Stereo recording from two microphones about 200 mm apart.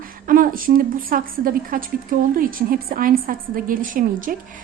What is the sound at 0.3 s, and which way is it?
A woman's voice, 45° right (ahead or behind).